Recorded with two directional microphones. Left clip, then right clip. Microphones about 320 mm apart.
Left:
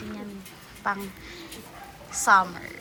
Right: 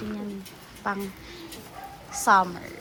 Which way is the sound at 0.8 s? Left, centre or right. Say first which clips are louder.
Left 1 dB; centre.